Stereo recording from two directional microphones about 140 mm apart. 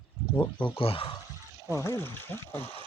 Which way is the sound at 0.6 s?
40° left (ahead or behind).